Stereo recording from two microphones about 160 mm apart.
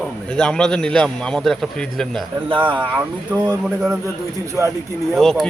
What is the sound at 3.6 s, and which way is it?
Speech, 5° right (ahead or behind).